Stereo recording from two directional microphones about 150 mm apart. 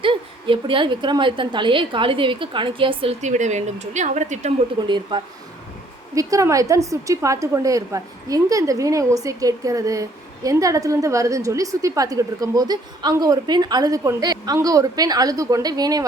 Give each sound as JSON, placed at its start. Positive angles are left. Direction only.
{"t": 0.0, "sound": "a woman's voice", "side_deg": -35}
{"t": 3.2, "sound": "speech", "side_deg": -50}
{"t": 4.9, "sound": "a woman's voice", "side_deg": -30}